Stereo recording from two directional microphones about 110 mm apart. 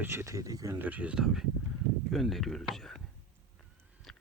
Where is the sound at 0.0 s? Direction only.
20° right (ahead or behind).